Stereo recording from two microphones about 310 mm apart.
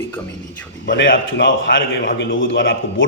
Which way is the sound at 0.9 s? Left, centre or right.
Left.